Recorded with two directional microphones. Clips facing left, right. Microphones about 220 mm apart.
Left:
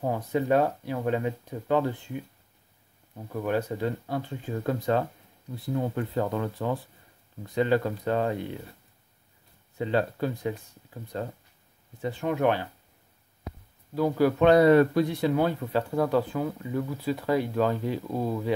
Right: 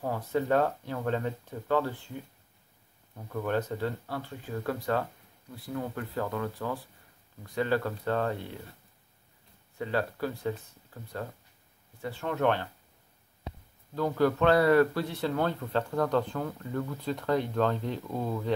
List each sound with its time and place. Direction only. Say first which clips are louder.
0.0 s speech: left 3 dB; 15° left (ahead or behind)
3.3 s speech: left 2 dB; 10° left (ahead or behind)
9.8 s speech: left 4 dB; 20° left (ahead or behind)
13.9 s speech: left 3 dB; 10° left (ahead or behind)